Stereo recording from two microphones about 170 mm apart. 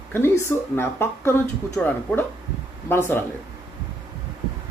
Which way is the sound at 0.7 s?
15° left (ahead or behind).